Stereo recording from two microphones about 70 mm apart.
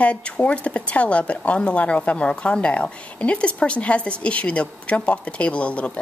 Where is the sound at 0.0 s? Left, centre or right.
Centre.